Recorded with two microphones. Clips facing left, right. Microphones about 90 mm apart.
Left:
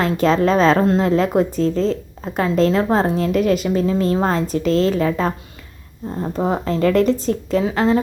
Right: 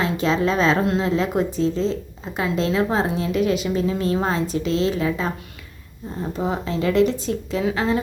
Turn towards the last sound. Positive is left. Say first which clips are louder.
# left 5 dB
turn(degrees=35)  # may be behind; listen again after turning